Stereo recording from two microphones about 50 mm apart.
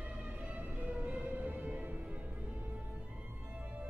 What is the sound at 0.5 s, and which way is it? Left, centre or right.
Music, right.